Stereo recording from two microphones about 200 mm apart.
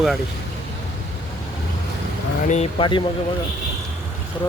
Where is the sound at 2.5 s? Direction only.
30° left (ahead or behind).